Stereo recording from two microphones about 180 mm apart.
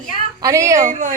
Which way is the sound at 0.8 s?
45° right (ahead or behind).